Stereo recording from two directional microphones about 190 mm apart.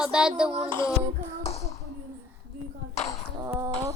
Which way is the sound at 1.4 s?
35° left (ahead or behind).